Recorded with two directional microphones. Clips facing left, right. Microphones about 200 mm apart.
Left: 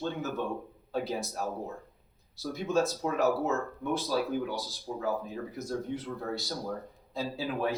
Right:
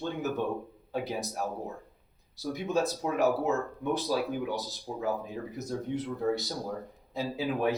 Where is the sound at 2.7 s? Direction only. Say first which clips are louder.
Left 1 dB; 15° right (ahead or behind).